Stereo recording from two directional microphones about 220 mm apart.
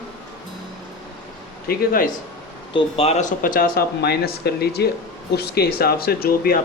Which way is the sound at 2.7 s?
25° left (ahead or behind).